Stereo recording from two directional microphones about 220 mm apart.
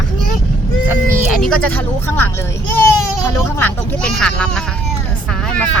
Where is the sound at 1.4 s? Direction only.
5° left (ahead or behind).